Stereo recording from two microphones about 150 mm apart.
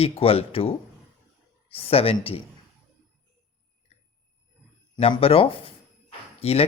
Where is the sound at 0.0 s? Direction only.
40° left (ahead or behind).